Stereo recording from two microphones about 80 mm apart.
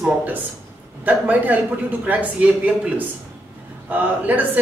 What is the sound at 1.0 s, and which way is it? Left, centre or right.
Speech, right.